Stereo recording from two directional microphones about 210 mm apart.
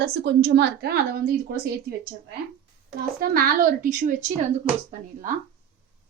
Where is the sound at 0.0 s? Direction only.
50° right (ahead or behind).